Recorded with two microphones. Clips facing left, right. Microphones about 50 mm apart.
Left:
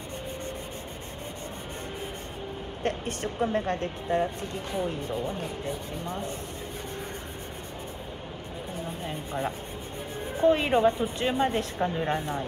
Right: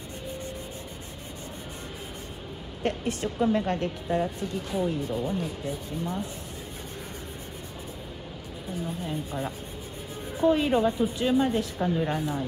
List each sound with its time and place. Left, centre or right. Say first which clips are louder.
2.8 s a woman's voice: right 2 dB; left
9.0 s a woman's voice: even; left
11.8 s a woman's voice: right 1 dB; centre
12.1 s a woman's voice: even; left